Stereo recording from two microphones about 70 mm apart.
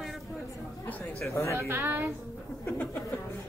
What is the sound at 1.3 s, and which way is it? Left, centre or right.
Speech, left.